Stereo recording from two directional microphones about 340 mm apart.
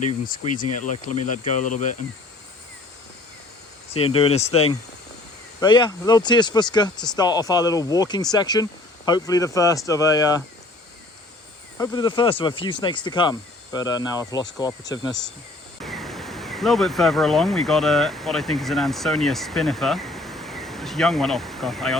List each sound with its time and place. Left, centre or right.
0.8 s speech: left
3.9 s speech: centre
11.8 s speech: centre
15.8 s speech: centre